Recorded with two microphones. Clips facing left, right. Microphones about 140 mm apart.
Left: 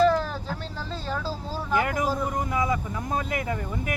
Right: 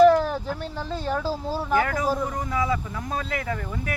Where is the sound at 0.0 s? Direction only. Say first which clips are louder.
Right 5 dB; 10° right (ahead or behind).